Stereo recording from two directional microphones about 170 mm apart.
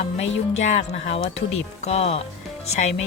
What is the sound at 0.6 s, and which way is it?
Speech, 40° left (ahead or behind).